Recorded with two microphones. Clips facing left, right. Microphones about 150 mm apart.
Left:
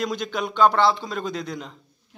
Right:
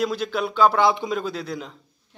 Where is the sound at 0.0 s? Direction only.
5° right (ahead or behind).